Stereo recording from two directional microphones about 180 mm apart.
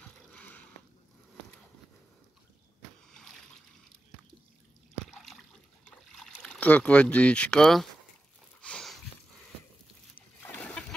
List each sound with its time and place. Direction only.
0.3 s a sound: 5° left (ahead or behind)
5.2 s water: centre (ahead or behind)
6.2 s speech: 5° left (ahead or behind)
8.5 s sniff: 5° left (ahead or behind)
10.1 s splash: 10° left (ahead or behind)